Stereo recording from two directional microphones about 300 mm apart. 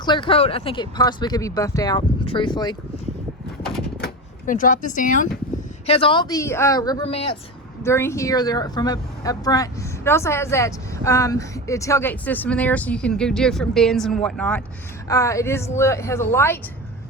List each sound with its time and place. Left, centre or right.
0.0 s speech: centre
3.6 s a sound: centre
4.0 s speech: left
7.8 s speech: centre